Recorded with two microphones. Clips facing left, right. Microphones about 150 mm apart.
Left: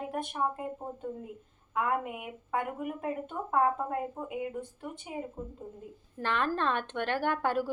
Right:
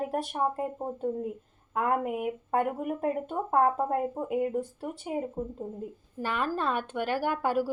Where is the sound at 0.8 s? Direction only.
20° right (ahead or behind).